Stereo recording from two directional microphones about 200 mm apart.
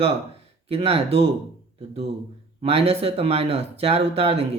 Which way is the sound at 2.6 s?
30° right (ahead or behind).